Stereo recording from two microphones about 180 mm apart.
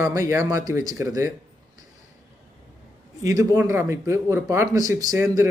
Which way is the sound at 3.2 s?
20° right (ahead or behind).